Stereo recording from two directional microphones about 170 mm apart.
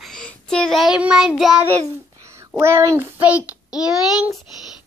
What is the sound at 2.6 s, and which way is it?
A child's voice, 15° right (ahead or behind).